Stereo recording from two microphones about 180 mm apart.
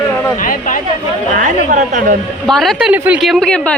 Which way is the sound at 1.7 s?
45° right (ahead or behind).